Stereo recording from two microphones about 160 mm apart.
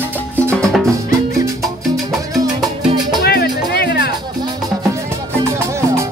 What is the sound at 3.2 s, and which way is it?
Music, 80° left.